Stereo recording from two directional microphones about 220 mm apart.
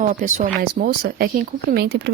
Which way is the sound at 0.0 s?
35° right (ahead or behind).